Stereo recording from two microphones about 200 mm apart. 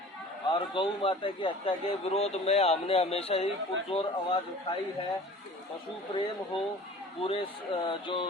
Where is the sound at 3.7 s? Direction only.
65° right (ahead or behind).